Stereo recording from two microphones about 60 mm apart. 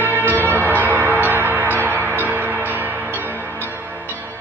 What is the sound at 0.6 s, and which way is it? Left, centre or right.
Change ringing, right.